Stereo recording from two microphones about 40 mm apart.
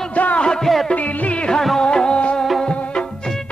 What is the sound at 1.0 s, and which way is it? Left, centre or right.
Music, left.